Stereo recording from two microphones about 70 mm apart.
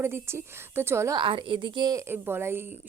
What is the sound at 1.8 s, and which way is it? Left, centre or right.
Speech, right.